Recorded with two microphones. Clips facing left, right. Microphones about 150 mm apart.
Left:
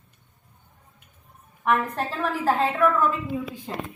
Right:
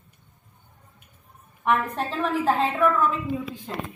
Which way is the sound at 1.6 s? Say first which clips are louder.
Even; centre (ahead or behind).